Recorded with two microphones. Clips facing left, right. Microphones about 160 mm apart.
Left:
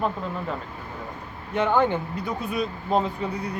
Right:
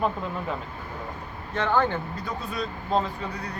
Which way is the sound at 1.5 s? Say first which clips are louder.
Left 3 dB; 15° left (ahead or behind).